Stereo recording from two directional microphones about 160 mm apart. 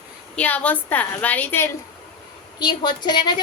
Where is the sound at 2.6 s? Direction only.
25° left (ahead or behind).